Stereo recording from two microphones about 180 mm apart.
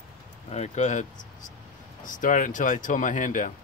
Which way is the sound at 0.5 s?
40° left (ahead or behind).